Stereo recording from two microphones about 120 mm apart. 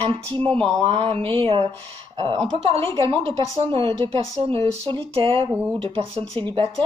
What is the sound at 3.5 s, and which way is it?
Speech, 50° right (ahead or behind).